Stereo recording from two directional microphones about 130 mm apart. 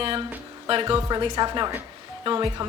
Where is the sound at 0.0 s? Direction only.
45° right (ahead or behind).